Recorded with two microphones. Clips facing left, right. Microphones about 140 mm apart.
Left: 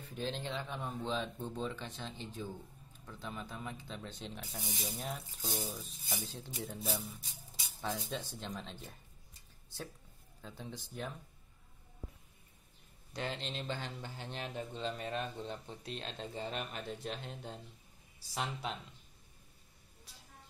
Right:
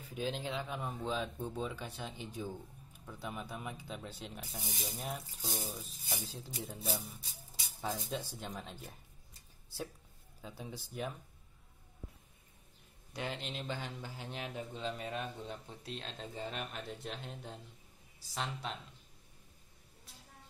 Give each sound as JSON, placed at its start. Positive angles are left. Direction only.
{"t": 0.1, "sound": "a man's voice", "side_deg": -5}
{"t": 8.1, "sound": "speech", "side_deg": -10}
{"t": 10.4, "sound": "speech", "side_deg": -10}
{"t": 13.1, "sound": "a man's voice", "side_deg": -5}